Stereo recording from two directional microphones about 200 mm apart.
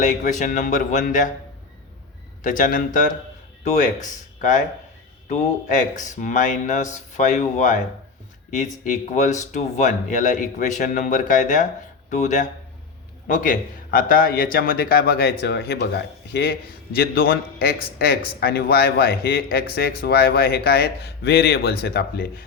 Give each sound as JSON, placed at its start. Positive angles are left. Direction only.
{"t": 0.0, "sound": "speech", "side_deg": 40}
{"t": 2.4, "sound": "a man's voice", "side_deg": 40}